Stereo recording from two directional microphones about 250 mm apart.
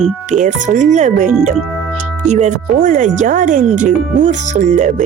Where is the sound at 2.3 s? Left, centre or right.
Right.